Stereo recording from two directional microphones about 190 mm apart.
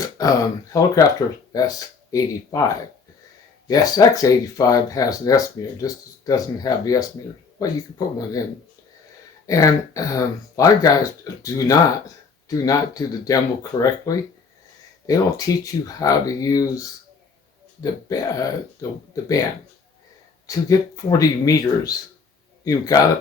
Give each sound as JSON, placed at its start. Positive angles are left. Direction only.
{"t": 0.2, "sound": "speech", "side_deg": 15}
{"t": 9.5, "sound": "speech", "side_deg": 15}
{"t": 20.7, "sound": "speech", "side_deg": 20}